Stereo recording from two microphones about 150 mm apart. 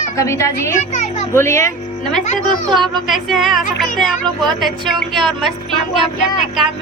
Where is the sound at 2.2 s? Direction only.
50° left (ahead or behind).